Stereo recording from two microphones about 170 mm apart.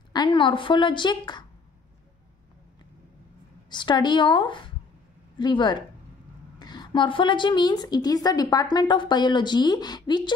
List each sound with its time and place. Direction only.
0.1 s a woman's voice: 25° left (ahead or behind)
3.7 s a woman's voice: 25° left (ahead or behind)